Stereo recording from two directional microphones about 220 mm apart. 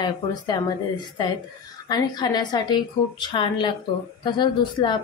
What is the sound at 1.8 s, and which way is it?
A woman's voice, 20° left (ahead or behind).